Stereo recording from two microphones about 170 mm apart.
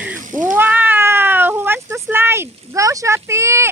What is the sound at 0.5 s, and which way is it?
Speech, 10° right (ahead or behind).